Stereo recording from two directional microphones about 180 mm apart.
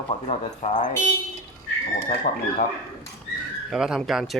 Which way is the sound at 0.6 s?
40° left (ahead or behind).